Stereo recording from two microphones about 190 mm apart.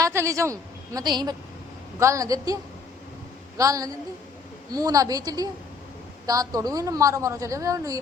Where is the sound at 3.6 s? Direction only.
15° right (ahead or behind).